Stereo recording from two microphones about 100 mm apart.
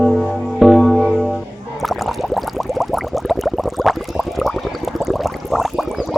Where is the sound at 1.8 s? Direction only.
Centre (ahead or behind).